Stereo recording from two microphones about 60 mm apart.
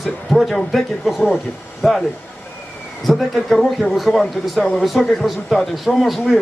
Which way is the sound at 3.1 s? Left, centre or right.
Centre.